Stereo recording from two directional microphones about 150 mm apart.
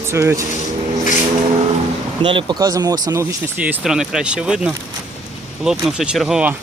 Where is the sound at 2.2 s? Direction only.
30° right (ahead or behind); by 6.5 s 5° right (ahead or behind).